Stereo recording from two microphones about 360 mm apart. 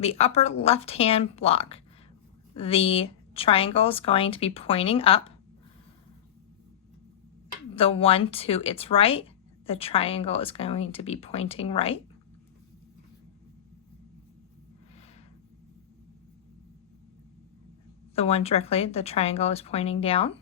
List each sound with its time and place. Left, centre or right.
0.0 s speech: centre
7.8 s speech: centre
18.1 s speech: centre